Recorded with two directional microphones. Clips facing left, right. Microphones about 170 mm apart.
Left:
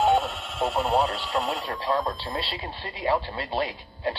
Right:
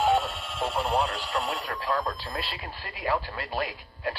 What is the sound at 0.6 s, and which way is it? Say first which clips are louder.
Speech: left 3 dB; 25° left (ahead or behind).